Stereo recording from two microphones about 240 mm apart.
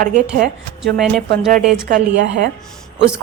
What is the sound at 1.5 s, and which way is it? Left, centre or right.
Speech, right.